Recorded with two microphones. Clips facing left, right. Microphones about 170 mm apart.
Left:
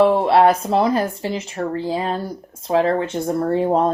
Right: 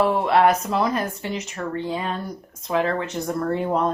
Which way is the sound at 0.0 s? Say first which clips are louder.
Left 4 dB; 30° left (ahead or behind).